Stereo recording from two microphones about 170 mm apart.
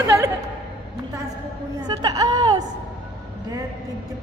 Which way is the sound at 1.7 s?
25° right (ahead or behind).